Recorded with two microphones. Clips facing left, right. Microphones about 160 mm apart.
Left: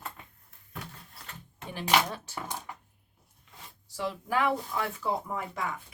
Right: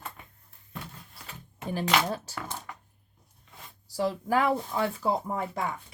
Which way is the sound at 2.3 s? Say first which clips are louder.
Even; 15° left (ahead or behind).